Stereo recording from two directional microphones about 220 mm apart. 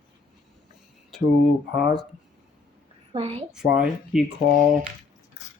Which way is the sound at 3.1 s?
25° right (ahead or behind).